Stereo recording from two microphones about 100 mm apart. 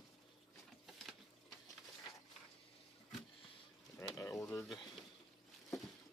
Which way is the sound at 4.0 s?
35° left (ahead or behind).